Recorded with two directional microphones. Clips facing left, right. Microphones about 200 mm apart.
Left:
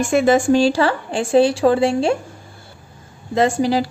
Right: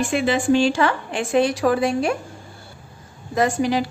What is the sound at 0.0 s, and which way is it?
A woman's voice, 45° left (ahead or behind).